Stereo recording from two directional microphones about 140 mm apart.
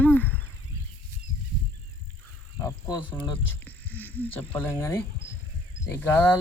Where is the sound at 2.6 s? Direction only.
25° left (ahead or behind).